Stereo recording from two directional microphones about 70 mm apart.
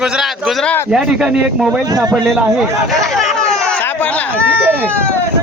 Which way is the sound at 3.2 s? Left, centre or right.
Centre.